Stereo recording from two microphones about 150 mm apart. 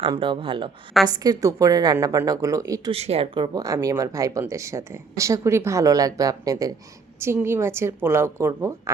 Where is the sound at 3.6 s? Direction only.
20° right (ahead or behind).